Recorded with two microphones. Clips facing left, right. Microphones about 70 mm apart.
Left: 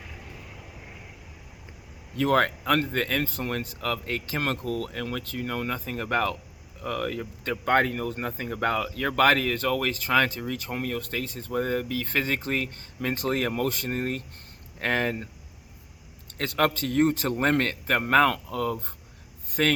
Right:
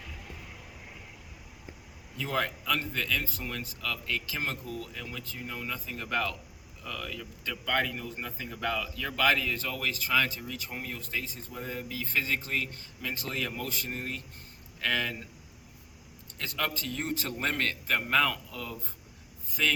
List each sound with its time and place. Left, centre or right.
2.1 s speech: left
4.4 s speech: left
16.4 s speech: left